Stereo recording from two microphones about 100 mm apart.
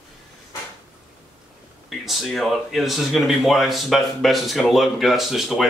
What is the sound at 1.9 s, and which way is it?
Speech, centre (ahead or behind).